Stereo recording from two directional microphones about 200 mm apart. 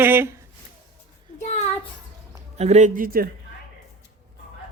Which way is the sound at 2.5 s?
35° right (ahead or behind).